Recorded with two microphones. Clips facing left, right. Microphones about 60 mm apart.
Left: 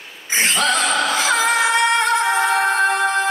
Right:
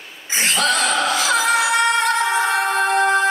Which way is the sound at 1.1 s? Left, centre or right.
Left.